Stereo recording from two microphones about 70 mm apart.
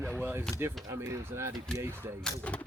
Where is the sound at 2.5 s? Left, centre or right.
Centre.